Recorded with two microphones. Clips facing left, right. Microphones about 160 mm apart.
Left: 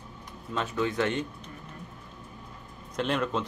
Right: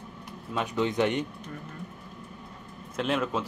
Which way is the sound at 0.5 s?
15° right (ahead or behind).